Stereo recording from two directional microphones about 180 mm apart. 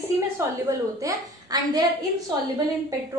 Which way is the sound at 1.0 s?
20° right (ahead or behind).